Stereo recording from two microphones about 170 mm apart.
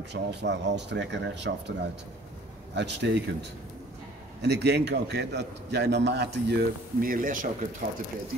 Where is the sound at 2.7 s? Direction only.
90° right.